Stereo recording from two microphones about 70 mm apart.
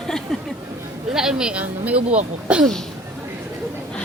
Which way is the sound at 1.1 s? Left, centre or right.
Centre.